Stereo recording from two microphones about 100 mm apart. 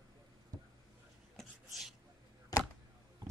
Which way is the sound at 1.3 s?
Centre (ahead or behind).